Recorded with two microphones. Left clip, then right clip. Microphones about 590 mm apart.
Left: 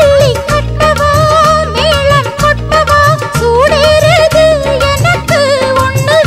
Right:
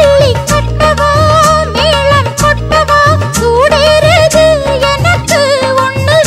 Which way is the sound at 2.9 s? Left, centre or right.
Left.